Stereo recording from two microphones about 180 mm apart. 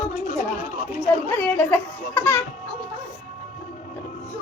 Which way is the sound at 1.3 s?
10° left (ahead or behind).